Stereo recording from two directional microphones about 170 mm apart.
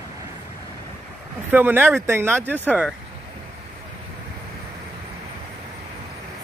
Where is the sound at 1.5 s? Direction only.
10° right (ahead or behind).